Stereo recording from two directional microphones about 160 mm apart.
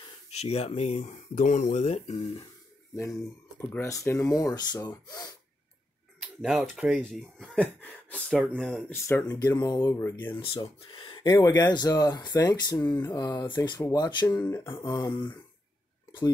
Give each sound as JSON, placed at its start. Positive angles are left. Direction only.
{"t": 0.3, "sound": "speech", "side_deg": 40}
{"t": 3.0, "sound": "speech", "side_deg": 15}
{"t": 6.3, "sound": "speech", "side_deg": -5}
{"t": 7.0, "sound": "speech", "side_deg": 5}
{"t": 8.9, "sound": "speech", "side_deg": 15}
{"t": 10.6, "sound": "speech", "side_deg": 30}